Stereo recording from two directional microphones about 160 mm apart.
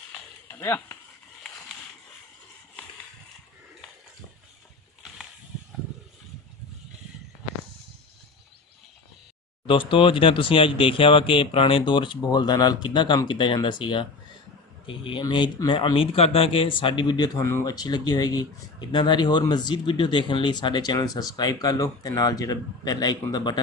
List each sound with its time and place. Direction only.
0.5 s speech: 15° left (ahead or behind)
9.7 s speech: 35° left (ahead or behind)